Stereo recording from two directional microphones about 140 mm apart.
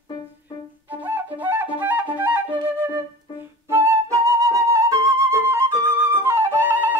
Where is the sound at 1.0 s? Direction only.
15° right (ahead or behind).